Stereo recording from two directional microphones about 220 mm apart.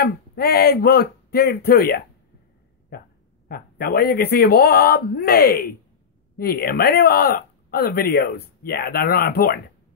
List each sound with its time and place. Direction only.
0.0 s speech: 45° left (ahead or behind)